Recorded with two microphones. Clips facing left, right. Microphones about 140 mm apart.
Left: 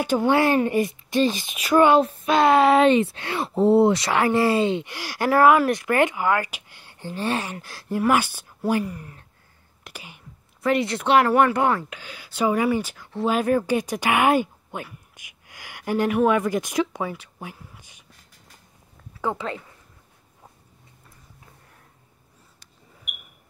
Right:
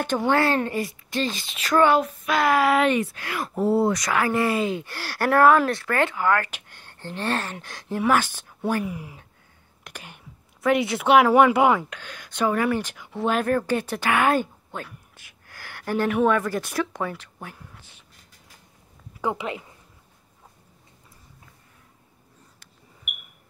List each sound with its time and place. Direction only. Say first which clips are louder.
0.0 s speech: left 2 dB; 10° left (ahead or behind)
2.0 s speech: left 4 dB; 25° left (ahead or behind)
4.8 s speech: left 1 dB; 15° left (ahead or behind)
5.7 s speech: left 3 dB; 15° left (ahead or behind)
8.8 s speech: right 2 dB; 10° right (ahead or behind)
9.8 s a woman's voice: even; 5° left (ahead or behind)
11.9 s speech: even; 5° left (ahead or behind)
12.9 s speech: left 1 dB; centre (ahead or behind)
13.3 s speech: left 2 dB; 10° left (ahead or behind)
19.2 s speech: even; 15° right (ahead or behind)